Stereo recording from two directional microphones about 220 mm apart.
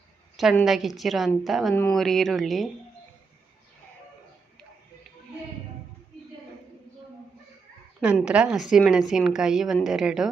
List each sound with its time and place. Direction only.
0.3 s a woman's voice: centre (ahead or behind)
8.0 s a woman's voice: 5° right (ahead or behind)